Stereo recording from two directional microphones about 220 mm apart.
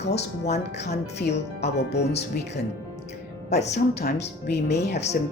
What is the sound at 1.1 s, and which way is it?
Speech, 50° left (ahead or behind).